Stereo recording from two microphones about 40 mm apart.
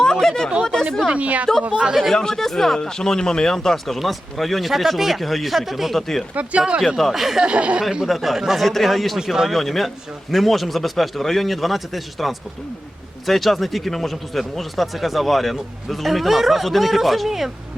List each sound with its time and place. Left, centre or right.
0.0 s a sound: centre
1.1 s a woman's voice: right
2.1 s speech: centre
6.3 s a woman's voice: right
6.6 s speech: centre
6.8 s speech: centre
7.3 s speech: right
7.8 s speech: centre
8.0 s speech: centre
9.1 s speech: centre
9.5 s speech: centre